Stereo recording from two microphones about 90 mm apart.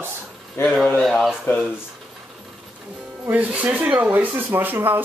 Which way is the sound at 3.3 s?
15° right (ahead or behind).